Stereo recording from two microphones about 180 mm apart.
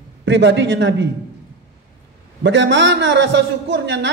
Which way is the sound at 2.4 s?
90° right.